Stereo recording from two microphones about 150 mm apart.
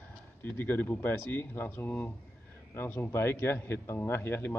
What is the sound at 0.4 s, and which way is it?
Speech, 15° left (ahead or behind).